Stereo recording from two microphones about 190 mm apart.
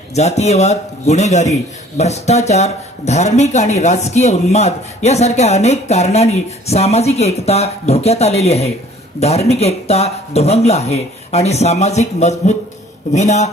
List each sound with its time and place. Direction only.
0.1 s a man's voice: 35° left (ahead or behind)